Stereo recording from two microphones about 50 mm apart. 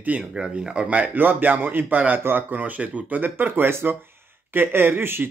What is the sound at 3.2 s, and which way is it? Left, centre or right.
Speech, right.